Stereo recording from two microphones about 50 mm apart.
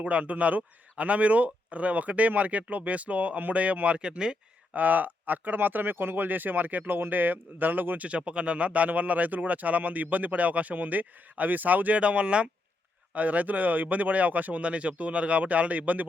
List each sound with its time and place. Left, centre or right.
0.0 s speech: right
4.7 s speech: right